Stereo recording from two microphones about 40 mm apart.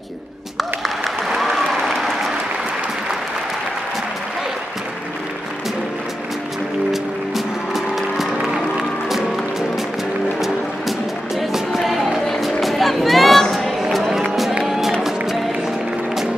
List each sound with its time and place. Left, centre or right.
0.8 s applause: centre
6.9 s music: centre
13.5 s a sound: centre
14.7 s music: centre